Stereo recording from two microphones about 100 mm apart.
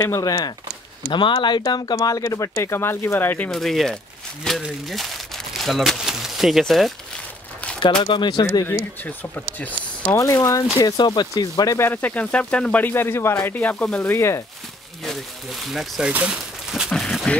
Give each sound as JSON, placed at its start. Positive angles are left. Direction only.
{"t": 0.0, "sound": "speech", "side_deg": 35}
{"t": 1.1, "sound": "speech", "side_deg": 55}
{"t": 3.5, "sound": "speech", "side_deg": 0}
{"t": 7.8, "sound": "speech", "side_deg": 50}
{"t": 8.6, "sound": "speech", "side_deg": 15}
{"t": 10.1, "sound": "speech", "side_deg": 35}
{"t": 11.8, "sound": "speech", "side_deg": 20}
{"t": 14.0, "sound": "speech", "side_deg": 25}
{"t": 15.0, "sound": "speech", "side_deg": 0}
{"t": 16.9, "sound": "speech", "side_deg": 5}